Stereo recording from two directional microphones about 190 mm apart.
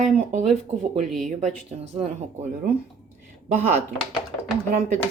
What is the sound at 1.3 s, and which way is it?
Speech, 40° right (ahead or behind).